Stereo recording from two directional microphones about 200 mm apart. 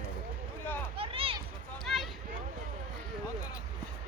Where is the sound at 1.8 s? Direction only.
Centre (ahead or behind).